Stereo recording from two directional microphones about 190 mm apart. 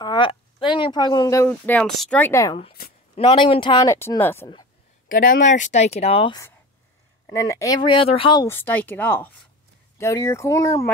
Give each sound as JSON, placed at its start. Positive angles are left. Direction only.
{"t": 0.0, "sound": "a sound", "side_deg": 25}
{"t": 0.7, "sound": "speech", "side_deg": 25}
{"t": 3.2, "sound": "speech", "side_deg": 30}
{"t": 5.0, "sound": "speech", "side_deg": 45}
{"t": 7.2, "sound": "speech", "side_deg": 15}
{"t": 8.5, "sound": "speech", "side_deg": 10}